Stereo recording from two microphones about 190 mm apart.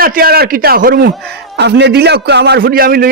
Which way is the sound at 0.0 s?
50° right (ahead or behind).